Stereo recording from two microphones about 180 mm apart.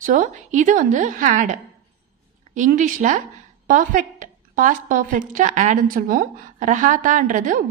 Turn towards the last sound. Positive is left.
turn(degrees=-50)  # may be behind; listen again after turning